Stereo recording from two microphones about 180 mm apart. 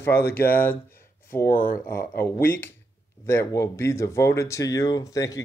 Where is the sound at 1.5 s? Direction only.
55° left (ahead or behind).